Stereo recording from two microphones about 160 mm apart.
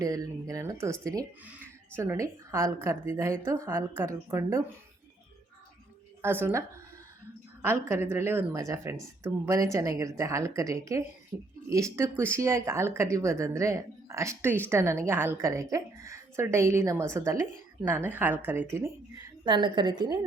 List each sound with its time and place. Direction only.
0.0 s a woman's voice: 20° right (ahead or behind)
6.2 s a woman's voice: 15° right (ahead or behind)
19.5 s speech: 30° right (ahead or behind)